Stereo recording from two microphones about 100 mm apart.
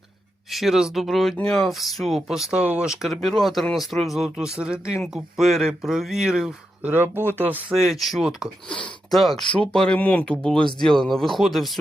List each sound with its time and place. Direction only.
0.5 s speech: 5° right (ahead or behind)
6.9 s speech: 20° right (ahead or behind)
7.7 s speech: 5° right (ahead or behind)